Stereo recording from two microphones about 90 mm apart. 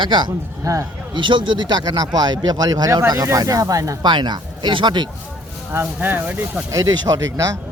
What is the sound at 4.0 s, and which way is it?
Speech, 55° right (ahead or behind).